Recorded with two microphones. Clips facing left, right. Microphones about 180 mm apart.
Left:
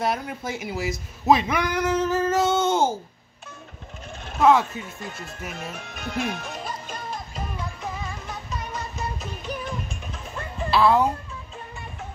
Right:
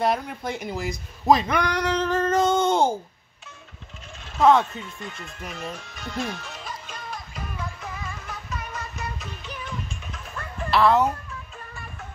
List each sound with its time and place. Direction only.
0.0 s a man's voice: 5° left (ahead or behind)
4.4 s speech: 5° left (ahead or behind)
4.8 s speech: 40° left (ahead or behind)
5.5 s speech: 55° left (ahead or behind)
7.3 s music: 20° left (ahead or behind)
9.5 s music: 40° left (ahead or behind)
10.7 s speech: 10° left (ahead or behind)